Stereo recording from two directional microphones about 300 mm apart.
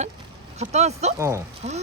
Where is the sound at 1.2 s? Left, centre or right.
Centre.